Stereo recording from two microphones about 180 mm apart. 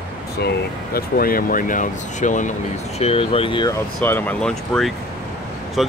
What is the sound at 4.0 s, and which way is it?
Speech, 10° left (ahead or behind).